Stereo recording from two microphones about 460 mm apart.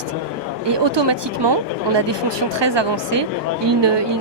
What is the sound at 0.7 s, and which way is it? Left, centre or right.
Speech, right.